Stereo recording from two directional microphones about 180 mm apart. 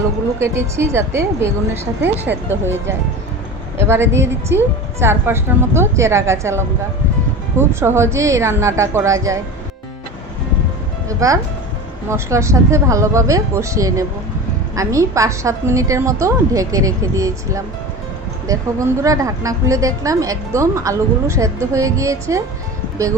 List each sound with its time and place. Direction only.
0.3 s a woman's voice: 15° right (ahead or behind)
11.2 s a woman's voice: 15° right (ahead or behind)